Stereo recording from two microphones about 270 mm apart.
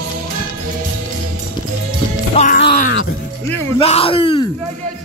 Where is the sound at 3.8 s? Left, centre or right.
Left.